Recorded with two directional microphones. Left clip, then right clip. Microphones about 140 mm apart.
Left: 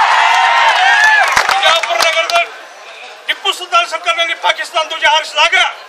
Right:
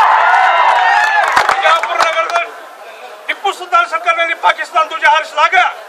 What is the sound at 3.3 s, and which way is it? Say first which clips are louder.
A man's voice: even; 5° left (ahead or behind).